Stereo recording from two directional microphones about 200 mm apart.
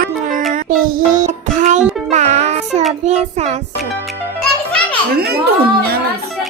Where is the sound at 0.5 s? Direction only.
45° right (ahead or behind).